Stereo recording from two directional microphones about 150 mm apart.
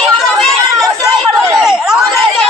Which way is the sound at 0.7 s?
25° right (ahead or behind).